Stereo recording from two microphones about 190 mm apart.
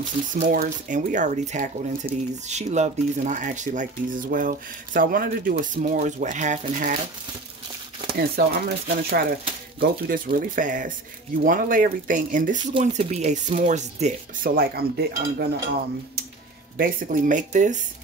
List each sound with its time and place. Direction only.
0.3 s speech: 45° right (ahead or behind)
8.2 s speech: 55° right (ahead or behind)
16.7 s speech: 50° right (ahead or behind)